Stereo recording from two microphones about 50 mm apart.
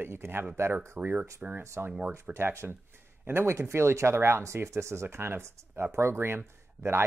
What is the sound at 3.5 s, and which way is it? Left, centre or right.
Speech, right.